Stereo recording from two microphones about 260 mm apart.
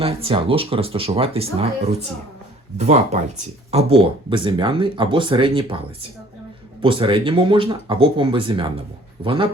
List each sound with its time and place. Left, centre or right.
0.0 s speech: right
2.7 s speech: right